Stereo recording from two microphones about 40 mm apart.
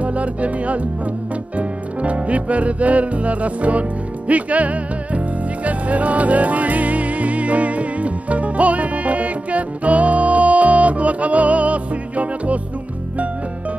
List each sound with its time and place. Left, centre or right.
0.0 s music: right